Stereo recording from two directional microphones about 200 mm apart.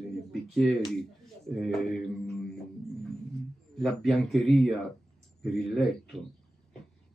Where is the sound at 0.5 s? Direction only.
Centre (ahead or behind).